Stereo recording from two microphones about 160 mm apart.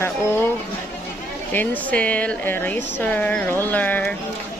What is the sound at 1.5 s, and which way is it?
A woman's voice, 10° left (ahead or behind).